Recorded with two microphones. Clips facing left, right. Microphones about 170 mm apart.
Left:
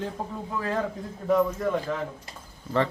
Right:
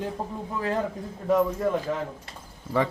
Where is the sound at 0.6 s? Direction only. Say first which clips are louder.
Right 1 dB; 20° right (ahead or behind).